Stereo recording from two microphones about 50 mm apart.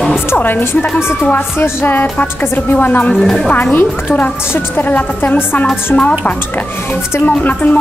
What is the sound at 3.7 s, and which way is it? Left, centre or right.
A woman's voice, left.